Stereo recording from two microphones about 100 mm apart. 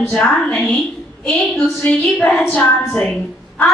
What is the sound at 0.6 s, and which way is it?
Speech, centre (ahead or behind).